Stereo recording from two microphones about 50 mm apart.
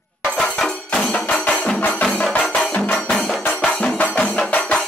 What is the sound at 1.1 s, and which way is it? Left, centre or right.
Music, left.